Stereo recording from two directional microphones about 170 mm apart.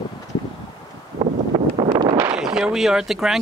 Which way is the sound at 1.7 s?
30° right (ahead or behind).